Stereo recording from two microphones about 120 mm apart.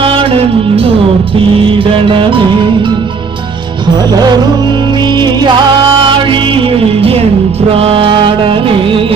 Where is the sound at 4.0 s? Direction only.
35° right (ahead or behind).